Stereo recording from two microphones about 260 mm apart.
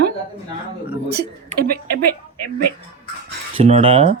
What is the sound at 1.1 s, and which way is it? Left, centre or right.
Speech, right.